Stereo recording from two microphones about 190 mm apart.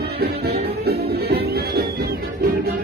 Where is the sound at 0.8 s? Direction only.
55° right (ahead or behind).